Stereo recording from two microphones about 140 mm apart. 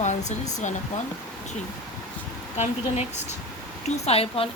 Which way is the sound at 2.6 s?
50° left (ahead or behind).